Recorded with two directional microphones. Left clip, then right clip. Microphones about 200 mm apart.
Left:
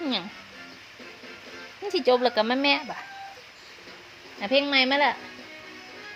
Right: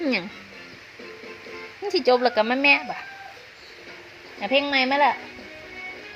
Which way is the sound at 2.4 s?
5° left (ahead or behind).